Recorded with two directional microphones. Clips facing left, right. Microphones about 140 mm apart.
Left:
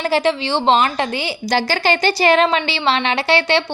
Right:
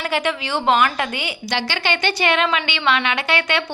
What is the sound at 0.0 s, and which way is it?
A woman's voice, 35° left (ahead or behind).